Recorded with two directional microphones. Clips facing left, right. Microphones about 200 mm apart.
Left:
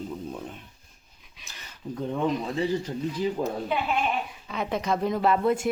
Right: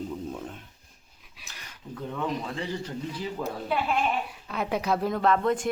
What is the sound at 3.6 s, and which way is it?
Speech, centre (ahead or behind).